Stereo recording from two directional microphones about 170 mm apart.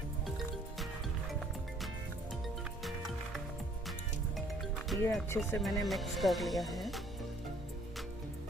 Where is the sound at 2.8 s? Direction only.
Centre (ahead or behind).